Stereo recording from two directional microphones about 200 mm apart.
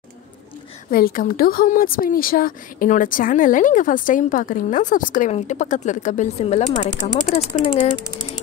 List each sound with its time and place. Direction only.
0.8 s speech: 45° left (ahead or behind)